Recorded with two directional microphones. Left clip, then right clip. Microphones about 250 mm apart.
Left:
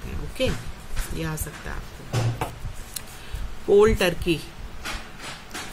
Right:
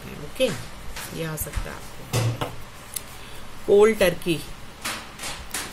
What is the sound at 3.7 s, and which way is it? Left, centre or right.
Speech, centre.